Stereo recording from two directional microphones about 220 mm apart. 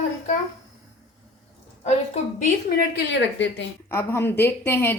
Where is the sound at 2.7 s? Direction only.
45° left (ahead or behind).